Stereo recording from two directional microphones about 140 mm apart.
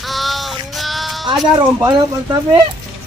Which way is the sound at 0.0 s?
Centre (ahead or behind).